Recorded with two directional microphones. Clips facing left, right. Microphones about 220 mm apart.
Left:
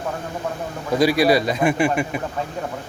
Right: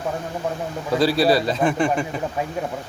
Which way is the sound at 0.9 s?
15° left (ahead or behind).